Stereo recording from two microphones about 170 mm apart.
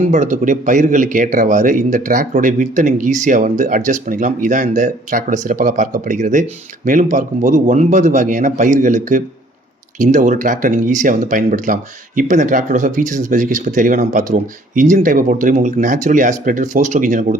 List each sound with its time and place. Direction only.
0.1 s speech: 45° right (ahead or behind)